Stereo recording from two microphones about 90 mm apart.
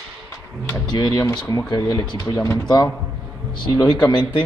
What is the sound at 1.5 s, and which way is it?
Speech, 40° left (ahead or behind).